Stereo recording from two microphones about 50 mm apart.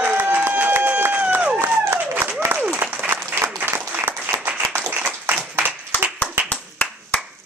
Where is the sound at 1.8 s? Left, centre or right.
Right.